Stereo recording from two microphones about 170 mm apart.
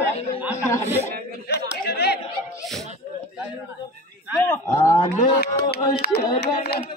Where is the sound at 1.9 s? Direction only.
75° left (ahead or behind).